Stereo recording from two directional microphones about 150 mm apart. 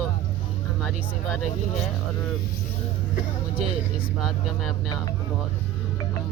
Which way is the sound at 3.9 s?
5° right (ahead or behind).